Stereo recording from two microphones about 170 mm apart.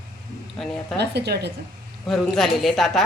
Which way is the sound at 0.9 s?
75° right (ahead or behind).